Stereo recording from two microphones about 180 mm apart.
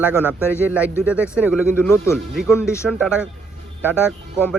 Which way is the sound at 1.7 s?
15° left (ahead or behind).